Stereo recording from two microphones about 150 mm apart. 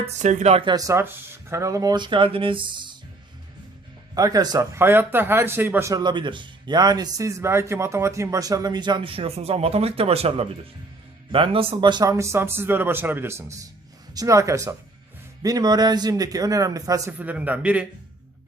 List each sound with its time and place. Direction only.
0.0 s speech: 55° right (ahead or behind); by 3.0 s 30° right (ahead or behind)
4.1 s speech: 25° right (ahead or behind)
17.2 s a man's voice: 10° right (ahead or behind)